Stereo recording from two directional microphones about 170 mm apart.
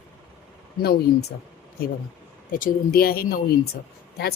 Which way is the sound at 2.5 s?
60° left (ahead or behind).